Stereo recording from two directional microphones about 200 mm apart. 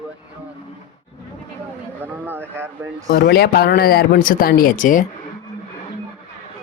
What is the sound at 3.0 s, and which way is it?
Speech, 50° left (ahead or behind).